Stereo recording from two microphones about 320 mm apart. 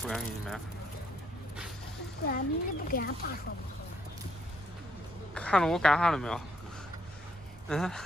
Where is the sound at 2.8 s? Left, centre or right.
Left.